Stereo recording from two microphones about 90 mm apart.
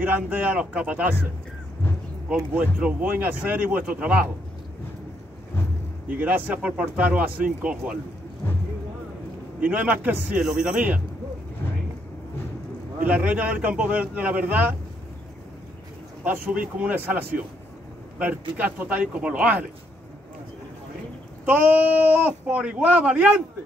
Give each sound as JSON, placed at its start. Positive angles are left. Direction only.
{"t": 0.0, "sound": "speech", "side_deg": -20}
{"t": 2.5, "sound": "speech", "side_deg": -15}
{"t": 6.0, "sound": "speech", "side_deg": -15}
{"t": 9.7, "sound": "speech", "side_deg": -15}
{"t": 13.0, "sound": "speech", "side_deg": -15}
{"t": 16.3, "sound": "speech", "side_deg": -15}
{"t": 18.6, "sound": "speech", "side_deg": -15}
{"t": 21.5, "sound": "speech", "side_deg": -20}